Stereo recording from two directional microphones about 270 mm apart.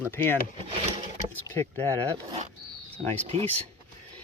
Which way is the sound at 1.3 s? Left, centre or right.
Centre.